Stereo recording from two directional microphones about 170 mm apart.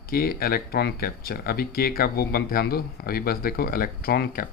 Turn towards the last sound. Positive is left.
turn(degrees=65)  # may be behind; listen again after turning